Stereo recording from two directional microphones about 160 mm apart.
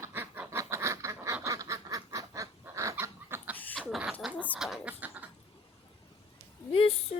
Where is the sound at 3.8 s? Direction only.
5° right (ahead or behind).